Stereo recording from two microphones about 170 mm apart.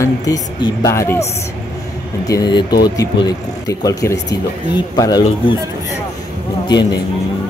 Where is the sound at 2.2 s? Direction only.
25° left (ahead or behind).